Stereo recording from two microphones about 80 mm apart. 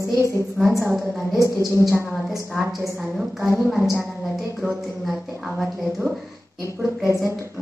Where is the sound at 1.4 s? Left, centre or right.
Right.